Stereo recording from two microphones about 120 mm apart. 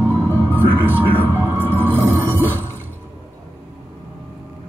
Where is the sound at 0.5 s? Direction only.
15° right (ahead or behind).